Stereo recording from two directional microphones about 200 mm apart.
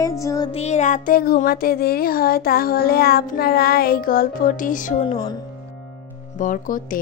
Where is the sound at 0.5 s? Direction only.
35° left (ahead or behind).